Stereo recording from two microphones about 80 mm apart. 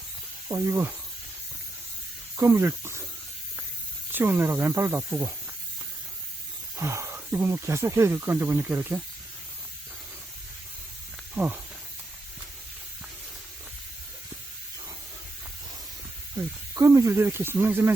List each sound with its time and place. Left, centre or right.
0.4 s speech: right
2.4 s speech: right
4.1 s speech: right
6.7 s a sound: right
7.3 s speech: right
16.3 s speech: right